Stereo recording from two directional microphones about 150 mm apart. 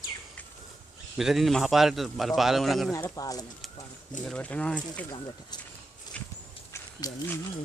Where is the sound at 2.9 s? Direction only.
20° left (ahead or behind).